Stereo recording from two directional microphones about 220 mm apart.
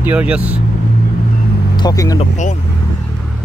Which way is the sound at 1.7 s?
15° left (ahead or behind).